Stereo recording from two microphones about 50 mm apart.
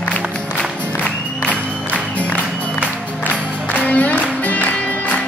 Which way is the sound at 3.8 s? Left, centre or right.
Left.